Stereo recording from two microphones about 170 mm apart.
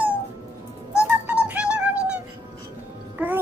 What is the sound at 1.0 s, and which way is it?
Music, 5° right (ahead or behind).